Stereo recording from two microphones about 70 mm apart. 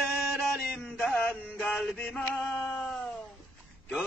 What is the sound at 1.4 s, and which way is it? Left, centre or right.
Male singing, centre.